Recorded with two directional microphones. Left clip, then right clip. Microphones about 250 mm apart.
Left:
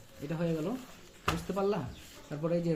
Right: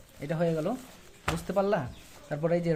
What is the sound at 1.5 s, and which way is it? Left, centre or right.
Speech, right.